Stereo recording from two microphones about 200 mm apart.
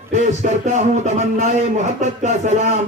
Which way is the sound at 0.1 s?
40° right (ahead or behind).